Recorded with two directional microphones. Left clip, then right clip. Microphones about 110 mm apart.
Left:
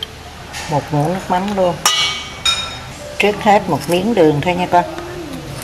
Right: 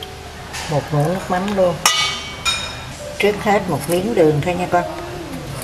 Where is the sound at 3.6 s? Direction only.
10° right (ahead or behind).